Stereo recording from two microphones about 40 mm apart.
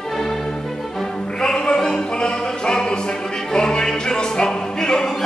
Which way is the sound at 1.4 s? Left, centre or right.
Left.